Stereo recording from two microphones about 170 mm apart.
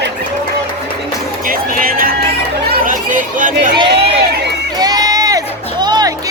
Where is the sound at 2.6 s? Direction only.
60° right (ahead or behind).